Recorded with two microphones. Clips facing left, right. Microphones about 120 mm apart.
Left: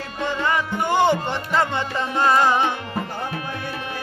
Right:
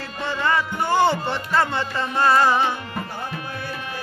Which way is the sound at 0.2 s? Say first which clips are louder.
Even; 15° left (ahead or behind).